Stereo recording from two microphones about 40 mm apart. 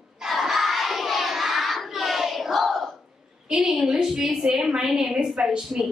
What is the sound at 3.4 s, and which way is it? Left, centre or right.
A woman's voice, right.